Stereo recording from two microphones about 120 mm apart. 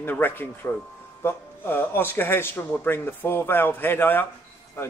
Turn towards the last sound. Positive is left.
turn(degrees=20)  # may be behind; listen again after turning